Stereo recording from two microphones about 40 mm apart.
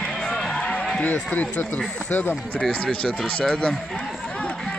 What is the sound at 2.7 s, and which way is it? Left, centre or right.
Speech, left.